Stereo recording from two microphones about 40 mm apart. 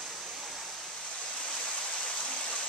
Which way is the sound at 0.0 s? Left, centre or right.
Centre.